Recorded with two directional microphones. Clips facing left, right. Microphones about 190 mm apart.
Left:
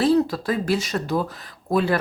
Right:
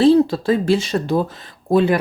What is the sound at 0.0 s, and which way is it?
Speech, 25° right (ahead or behind).